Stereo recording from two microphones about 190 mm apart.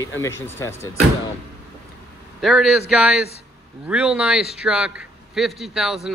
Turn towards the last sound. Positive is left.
turn(degrees=-5)  # may be behind; listen again after turning